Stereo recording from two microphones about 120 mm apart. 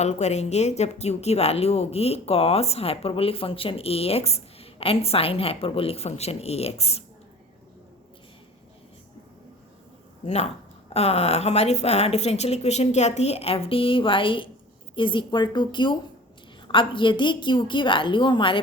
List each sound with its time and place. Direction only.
0.0 s speech: 70° left (ahead or behind)
10.2 s a woman's voice: 60° left (ahead or behind); by 18.6 s 45° left (ahead or behind)